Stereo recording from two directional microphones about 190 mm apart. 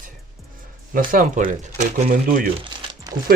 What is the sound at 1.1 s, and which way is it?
Speech, 45° right (ahead or behind).